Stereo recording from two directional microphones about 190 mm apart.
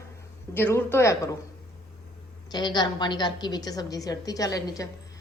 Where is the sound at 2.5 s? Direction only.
20° left (ahead or behind).